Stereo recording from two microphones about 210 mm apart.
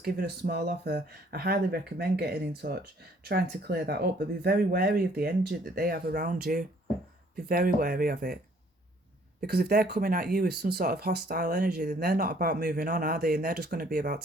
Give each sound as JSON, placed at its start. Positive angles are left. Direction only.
{"t": 0.0, "sound": "speech", "side_deg": -50}
{"t": 9.5, "sound": "speech", "side_deg": -50}